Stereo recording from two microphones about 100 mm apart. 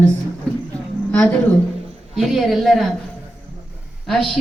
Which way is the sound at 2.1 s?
Centre (ahead or behind).